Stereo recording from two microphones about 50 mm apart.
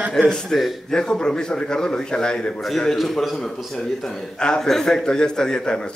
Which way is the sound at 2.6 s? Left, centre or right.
Centre.